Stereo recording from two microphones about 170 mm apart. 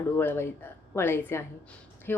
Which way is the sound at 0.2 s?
10° left (ahead or behind).